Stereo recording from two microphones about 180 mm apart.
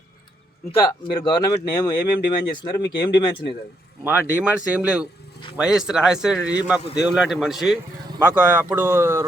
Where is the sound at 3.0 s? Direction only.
25° left (ahead or behind).